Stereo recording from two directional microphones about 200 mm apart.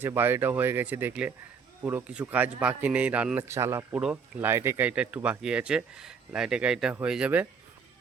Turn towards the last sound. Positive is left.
turn(degrees=-5)  # may be behind; listen again after turning